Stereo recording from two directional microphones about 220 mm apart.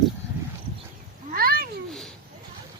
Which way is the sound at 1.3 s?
45° right (ahead or behind).